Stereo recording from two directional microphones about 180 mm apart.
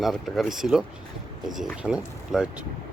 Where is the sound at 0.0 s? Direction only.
Centre (ahead or behind).